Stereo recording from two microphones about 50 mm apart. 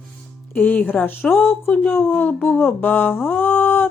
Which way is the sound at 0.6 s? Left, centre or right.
Left.